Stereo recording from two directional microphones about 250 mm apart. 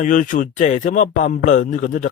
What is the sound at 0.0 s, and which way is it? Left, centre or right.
Speech, left.